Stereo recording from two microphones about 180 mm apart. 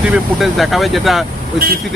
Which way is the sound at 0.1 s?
Centre (ahead or behind).